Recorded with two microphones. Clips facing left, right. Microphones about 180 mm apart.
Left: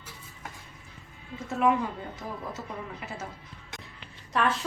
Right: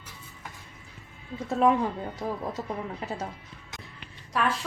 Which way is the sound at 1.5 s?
30° right (ahead or behind).